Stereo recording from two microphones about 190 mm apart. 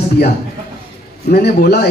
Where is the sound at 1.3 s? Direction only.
60° left (ahead or behind).